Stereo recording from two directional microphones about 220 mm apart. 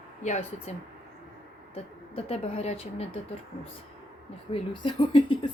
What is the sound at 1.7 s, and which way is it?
Speech, 25° left (ahead or behind).